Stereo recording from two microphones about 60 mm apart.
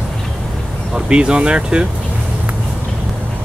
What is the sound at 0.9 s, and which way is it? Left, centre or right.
Speech, centre.